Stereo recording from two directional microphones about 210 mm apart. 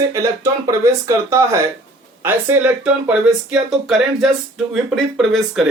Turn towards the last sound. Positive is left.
turn(degrees=0)  # may be behind; listen again after turning